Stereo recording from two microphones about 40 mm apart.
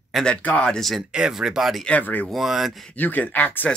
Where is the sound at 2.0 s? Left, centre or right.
Left.